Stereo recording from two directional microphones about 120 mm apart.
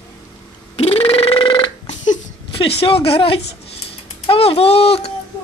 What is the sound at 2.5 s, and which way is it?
Speech, 50° left (ahead or behind).